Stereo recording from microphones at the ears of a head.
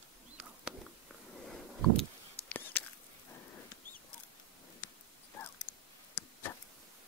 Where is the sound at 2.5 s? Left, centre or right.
Left.